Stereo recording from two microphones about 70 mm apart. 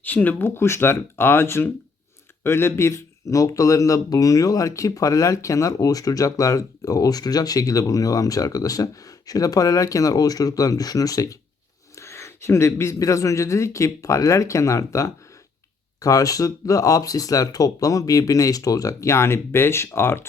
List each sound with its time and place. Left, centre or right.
0.0 s speech: left
3.2 s speech: left
11.9 s a sound: left
13.0 s speech: left